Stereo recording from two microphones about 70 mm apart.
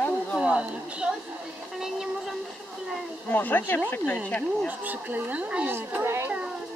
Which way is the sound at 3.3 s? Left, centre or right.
Left.